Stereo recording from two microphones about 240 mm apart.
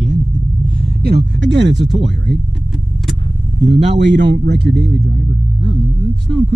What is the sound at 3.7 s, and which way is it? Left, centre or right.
Speech, right.